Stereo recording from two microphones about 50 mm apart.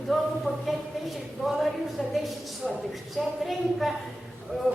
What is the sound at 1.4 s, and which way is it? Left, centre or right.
Speech, centre.